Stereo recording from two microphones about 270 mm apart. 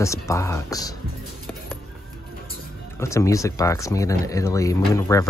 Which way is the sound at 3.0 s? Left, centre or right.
Centre.